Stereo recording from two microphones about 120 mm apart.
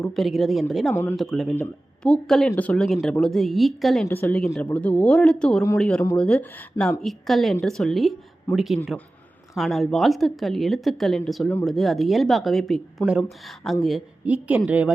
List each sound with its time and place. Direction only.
0.0 s a woman's voice: centre (ahead or behind)
1.5 s a woman's voice: 10° left (ahead or behind)
4.1 s a woman's voice: 15° left (ahead or behind)
14.3 s a woman's voice: 10° right (ahead or behind)